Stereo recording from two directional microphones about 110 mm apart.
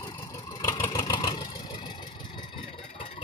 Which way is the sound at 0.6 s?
35° left (ahead or behind).